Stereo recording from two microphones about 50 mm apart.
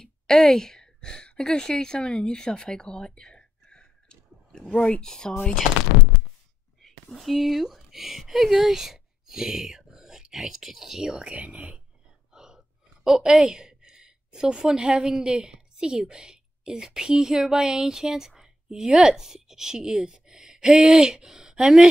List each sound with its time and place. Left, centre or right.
0.0 s a woman's voice: centre
6.8 s speech: centre
11.3 s speech: right
12.3 s a sound: centre
15.2 s a woman's voice: centre